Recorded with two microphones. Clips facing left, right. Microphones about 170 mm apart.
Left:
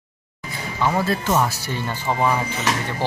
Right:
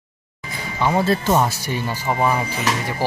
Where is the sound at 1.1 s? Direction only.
30° right (ahead or behind).